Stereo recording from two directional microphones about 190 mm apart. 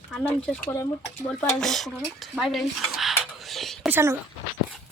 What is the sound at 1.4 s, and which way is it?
Dishes, centre (ahead or behind).